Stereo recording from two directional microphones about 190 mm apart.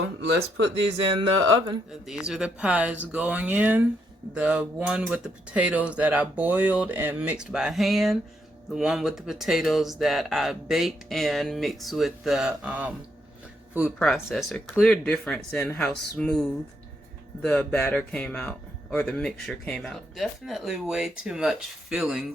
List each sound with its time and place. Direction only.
0.0 s speech: 90° right
1.9 s speech: centre (ahead or behind)
14.0 s speech: centre (ahead or behind)